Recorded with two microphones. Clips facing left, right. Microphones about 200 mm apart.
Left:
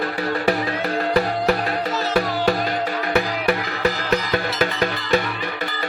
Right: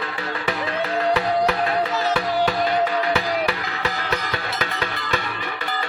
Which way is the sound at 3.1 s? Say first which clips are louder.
Left 3 dB; 50° left (ahead or behind).